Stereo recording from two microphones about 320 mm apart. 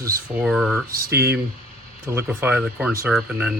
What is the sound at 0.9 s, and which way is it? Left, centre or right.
Speech, right.